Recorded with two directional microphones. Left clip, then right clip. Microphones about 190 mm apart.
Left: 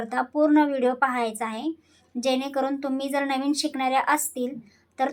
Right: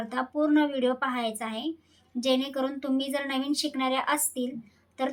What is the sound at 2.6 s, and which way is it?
Speech, 65° right (ahead or behind).